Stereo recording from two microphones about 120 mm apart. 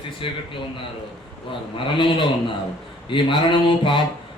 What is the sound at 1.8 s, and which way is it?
A man's voice, 45° left (ahead or behind).